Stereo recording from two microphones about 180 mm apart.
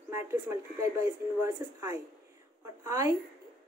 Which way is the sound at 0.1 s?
15° right (ahead or behind).